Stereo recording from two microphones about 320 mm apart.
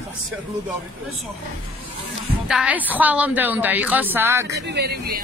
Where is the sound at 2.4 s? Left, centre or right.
Centre.